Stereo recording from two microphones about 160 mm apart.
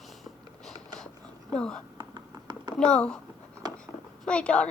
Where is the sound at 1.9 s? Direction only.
25° right (ahead or behind).